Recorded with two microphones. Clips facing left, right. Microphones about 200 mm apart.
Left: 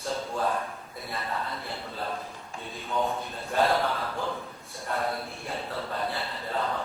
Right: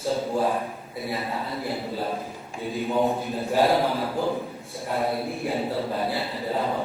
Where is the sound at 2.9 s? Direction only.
30° right (ahead or behind).